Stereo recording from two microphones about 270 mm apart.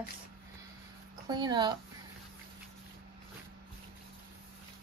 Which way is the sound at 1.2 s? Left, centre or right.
Centre.